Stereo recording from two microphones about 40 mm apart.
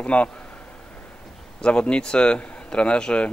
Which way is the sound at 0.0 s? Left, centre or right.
Left.